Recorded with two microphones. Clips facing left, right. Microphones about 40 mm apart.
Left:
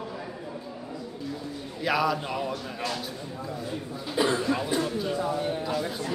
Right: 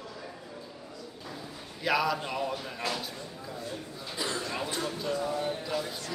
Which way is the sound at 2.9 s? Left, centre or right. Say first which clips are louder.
Left 2 dB; centre.